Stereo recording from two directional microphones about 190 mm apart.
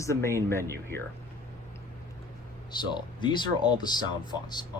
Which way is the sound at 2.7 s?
25° left (ahead or behind).